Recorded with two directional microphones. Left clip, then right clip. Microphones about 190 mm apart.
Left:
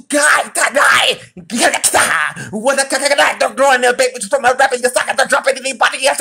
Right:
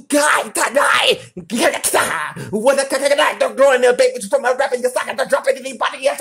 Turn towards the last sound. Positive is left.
turn(degrees=-10)  # may be behind; listen again after turning